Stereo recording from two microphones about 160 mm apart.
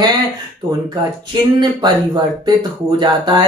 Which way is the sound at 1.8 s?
25° right (ahead or behind).